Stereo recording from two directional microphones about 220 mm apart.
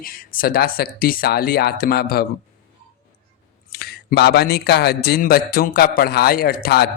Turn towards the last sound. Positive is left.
turn(degrees=45)  # may be behind; listen again after turning